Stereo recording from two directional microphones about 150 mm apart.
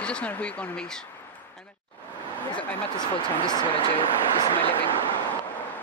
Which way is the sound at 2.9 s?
30° left (ahead or behind).